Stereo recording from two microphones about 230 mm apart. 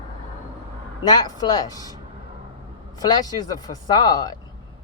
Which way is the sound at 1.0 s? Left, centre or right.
Centre.